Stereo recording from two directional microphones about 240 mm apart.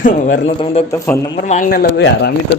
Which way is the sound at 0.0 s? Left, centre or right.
Left.